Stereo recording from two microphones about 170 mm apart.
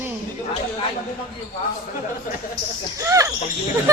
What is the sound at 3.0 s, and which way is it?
Speech, 20° right (ahead or behind).